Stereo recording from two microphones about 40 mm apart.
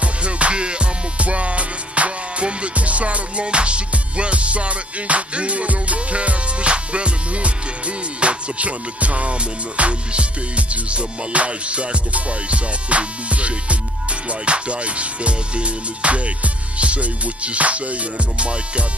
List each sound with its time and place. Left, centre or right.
0.0 s music: right